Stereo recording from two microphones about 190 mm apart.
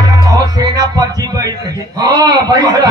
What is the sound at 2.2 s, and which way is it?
Speech, 20° right (ahead or behind).